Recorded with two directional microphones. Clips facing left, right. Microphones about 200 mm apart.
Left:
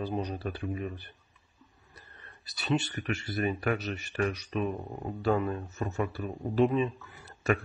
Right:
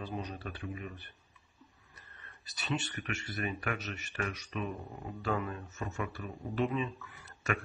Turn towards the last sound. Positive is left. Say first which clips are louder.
# left 7 dB
turn(degrees=35)  # may be behind; listen again after turning